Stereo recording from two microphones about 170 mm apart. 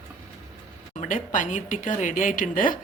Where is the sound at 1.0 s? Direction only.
50° left (ahead or behind).